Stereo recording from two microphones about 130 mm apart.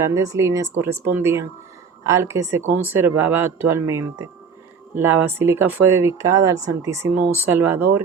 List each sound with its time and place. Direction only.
0.1 s speech: 25° right (ahead or behind)